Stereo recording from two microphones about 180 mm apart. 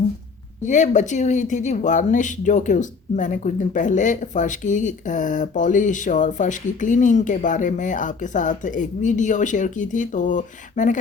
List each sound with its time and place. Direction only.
0.6 s speech: 45° left (ahead or behind)